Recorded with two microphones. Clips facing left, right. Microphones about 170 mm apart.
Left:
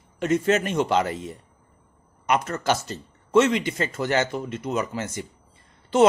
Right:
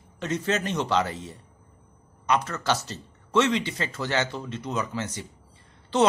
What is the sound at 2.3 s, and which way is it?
Speech, 50° left (ahead or behind).